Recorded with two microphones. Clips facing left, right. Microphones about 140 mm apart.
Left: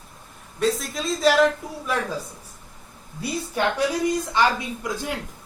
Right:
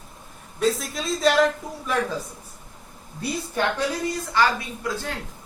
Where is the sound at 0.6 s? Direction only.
Centre (ahead or behind).